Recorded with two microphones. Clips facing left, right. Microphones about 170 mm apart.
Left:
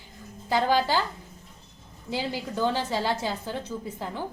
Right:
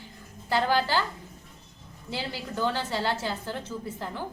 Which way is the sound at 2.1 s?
15° left (ahead or behind).